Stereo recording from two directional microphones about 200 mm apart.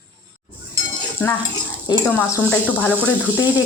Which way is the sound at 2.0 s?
10° left (ahead or behind).